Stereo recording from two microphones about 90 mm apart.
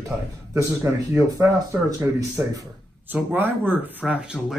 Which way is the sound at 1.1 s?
35° right (ahead or behind).